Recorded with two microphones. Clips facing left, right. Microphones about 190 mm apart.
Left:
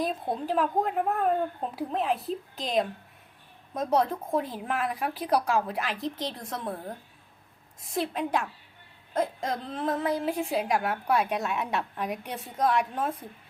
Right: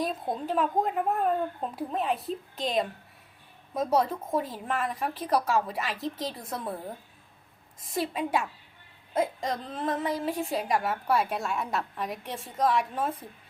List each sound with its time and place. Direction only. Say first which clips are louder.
0.0 s a woman's voice: left 1 dB; centre (ahead or behind)